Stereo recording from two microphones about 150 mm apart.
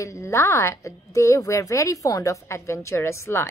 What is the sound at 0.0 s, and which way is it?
A woman's voice, 20° left (ahead or behind).